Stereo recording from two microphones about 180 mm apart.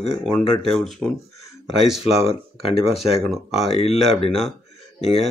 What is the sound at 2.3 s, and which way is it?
Speech, 35° left (ahead or behind).